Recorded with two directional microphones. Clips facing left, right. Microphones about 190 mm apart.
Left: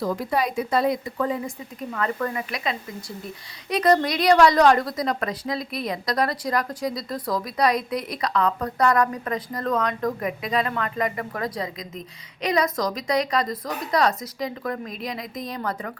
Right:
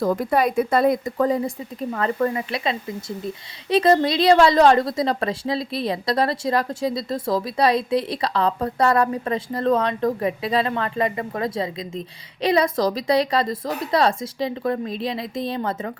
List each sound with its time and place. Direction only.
0.0 s a woman's voice: 50° right (ahead or behind); by 15.9 s 25° right (ahead or behind)